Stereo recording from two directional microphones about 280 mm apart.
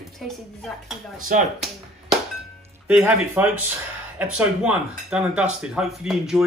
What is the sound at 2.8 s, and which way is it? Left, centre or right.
Speech, centre.